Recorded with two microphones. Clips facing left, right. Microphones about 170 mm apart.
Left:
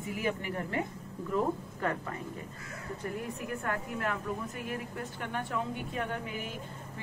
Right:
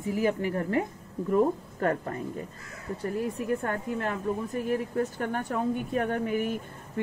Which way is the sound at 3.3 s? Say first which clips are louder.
Right 6 dB; 30° right (ahead or behind).